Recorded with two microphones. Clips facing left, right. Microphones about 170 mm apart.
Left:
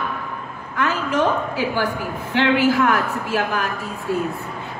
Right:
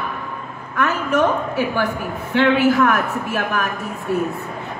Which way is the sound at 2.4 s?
60° right (ahead or behind).